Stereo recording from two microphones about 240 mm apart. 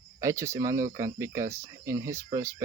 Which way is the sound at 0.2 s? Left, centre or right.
Centre.